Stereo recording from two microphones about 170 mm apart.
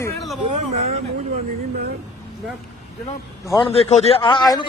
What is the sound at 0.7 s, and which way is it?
Speech, 40° right (ahead or behind).